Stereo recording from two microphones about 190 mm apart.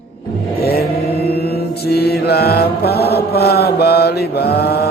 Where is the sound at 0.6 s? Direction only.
55° left (ahead or behind).